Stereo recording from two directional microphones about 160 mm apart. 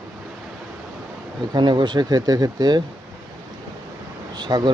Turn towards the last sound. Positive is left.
turn(degrees=-25)  # may be behind; listen again after turning